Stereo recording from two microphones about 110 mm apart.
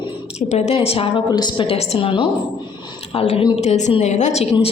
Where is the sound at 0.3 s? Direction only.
85° left; by 1.2 s 55° left (ahead or behind).